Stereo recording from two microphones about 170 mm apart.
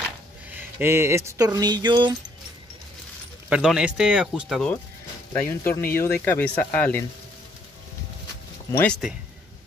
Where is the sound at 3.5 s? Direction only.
5° right (ahead or behind).